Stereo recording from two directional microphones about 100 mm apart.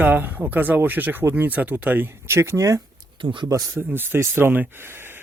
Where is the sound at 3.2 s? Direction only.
55° right (ahead or behind).